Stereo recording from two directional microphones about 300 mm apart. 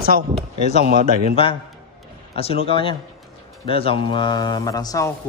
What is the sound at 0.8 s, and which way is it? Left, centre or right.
Speech, right.